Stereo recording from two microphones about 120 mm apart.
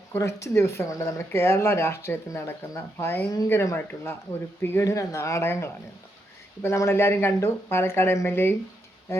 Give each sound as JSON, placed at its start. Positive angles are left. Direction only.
{"t": 0.1, "sound": "speech", "side_deg": 25}